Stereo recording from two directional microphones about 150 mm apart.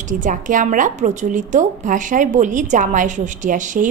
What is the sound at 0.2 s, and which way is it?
A woman's voice, 60° right (ahead or behind).